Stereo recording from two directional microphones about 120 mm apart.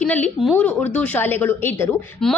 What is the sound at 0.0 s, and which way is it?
A woman's voice, 10° left (ahead or behind).